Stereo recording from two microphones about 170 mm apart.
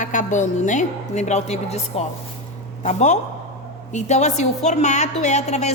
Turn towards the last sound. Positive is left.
turn(degrees=40)  # may be behind; listen again after turning